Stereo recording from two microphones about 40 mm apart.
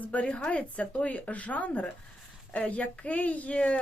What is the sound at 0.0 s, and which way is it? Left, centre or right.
A woman's voice, left.